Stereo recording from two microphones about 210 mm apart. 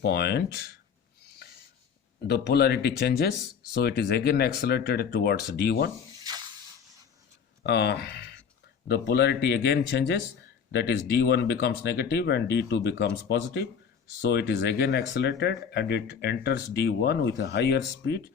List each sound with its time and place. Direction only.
0.0 s speech: 50° left (ahead or behind)
2.2 s speech: 50° left (ahead or behind)
7.6 s speech: 50° left (ahead or behind)